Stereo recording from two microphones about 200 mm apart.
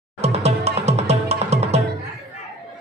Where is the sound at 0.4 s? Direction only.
30° right (ahead or behind).